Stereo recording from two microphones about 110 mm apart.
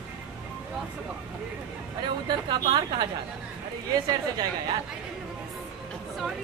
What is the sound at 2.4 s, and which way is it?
Speech, 40° right (ahead or behind).